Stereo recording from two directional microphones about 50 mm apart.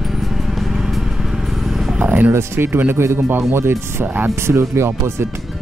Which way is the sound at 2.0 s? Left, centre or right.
Right.